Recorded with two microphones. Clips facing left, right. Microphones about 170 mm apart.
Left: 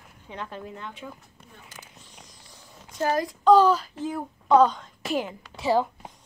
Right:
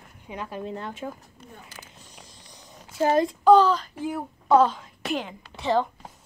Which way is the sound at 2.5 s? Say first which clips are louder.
Right 3 dB; 20° right (ahead or behind).